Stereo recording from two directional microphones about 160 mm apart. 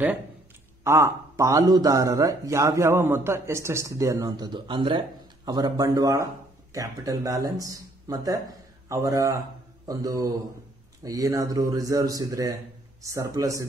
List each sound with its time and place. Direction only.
0.8 s a man's voice: 15° right (ahead or behind)